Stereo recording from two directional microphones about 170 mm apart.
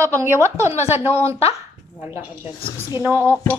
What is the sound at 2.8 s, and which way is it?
Speech, 15° right (ahead or behind).